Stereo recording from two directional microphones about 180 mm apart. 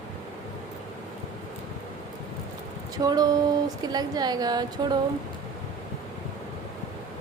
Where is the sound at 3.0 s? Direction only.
20° right (ahead or behind).